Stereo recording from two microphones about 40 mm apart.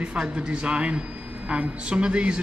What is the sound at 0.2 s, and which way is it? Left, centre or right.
Speech, right.